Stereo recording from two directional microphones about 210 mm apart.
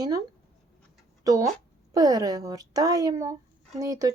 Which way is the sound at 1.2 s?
15° right (ahead or behind).